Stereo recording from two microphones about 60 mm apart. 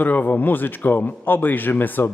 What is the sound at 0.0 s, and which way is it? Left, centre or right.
A man's voice, left.